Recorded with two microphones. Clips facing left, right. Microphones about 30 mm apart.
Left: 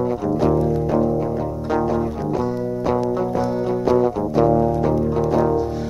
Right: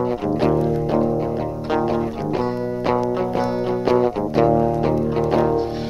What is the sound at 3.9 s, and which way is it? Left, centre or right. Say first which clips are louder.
Music: even; right.